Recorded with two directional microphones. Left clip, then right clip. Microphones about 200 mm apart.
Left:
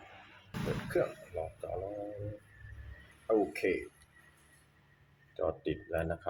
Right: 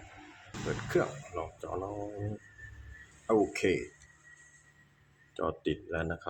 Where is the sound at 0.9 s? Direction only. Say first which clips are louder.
Right 2 dB; 35° right (ahead or behind).